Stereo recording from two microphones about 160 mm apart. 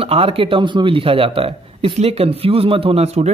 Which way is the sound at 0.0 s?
35° right (ahead or behind).